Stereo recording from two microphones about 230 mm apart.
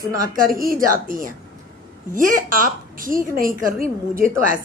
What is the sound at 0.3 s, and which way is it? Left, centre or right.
A woman's voice, right.